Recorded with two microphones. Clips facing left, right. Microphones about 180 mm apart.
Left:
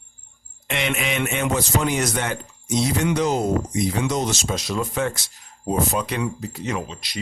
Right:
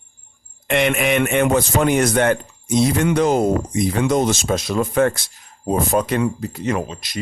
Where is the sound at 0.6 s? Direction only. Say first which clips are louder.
Right 7 dB; 55° right (ahead or behind).